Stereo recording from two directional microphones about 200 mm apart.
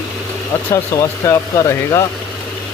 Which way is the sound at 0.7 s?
15° left (ahead or behind).